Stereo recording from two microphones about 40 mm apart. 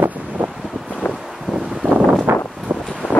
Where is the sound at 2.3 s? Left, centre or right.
Right.